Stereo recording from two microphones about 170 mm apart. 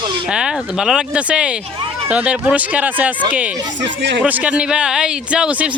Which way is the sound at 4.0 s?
90° right.